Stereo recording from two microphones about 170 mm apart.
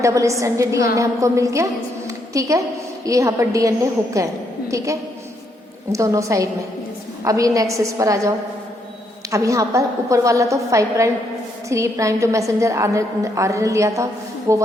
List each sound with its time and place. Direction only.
0.0 s a woman's voice: 20° right (ahead or behind)
5.9 s a woman's voice: 20° right (ahead or behind)
9.3 s a woman's voice: 20° right (ahead or behind)